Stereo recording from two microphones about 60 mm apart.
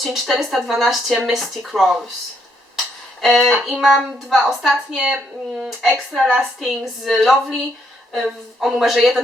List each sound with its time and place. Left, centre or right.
0.0 s speech: centre
2.7 s a sound: centre
4.3 s speech: centre
6.2 s a sound: centre
6.7 s speech: centre
8.6 s speech: centre